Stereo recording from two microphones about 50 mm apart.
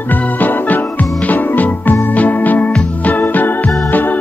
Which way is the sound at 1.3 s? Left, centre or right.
Left.